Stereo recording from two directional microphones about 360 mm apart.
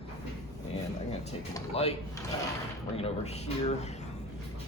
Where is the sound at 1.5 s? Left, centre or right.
Centre.